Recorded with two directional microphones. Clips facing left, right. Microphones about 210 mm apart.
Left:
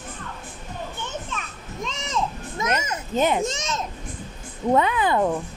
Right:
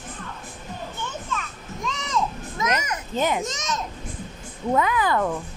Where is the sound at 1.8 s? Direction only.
25° left (ahead or behind).